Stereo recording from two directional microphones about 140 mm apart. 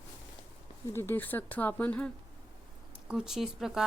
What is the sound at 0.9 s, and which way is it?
Speech, 15° left (ahead or behind).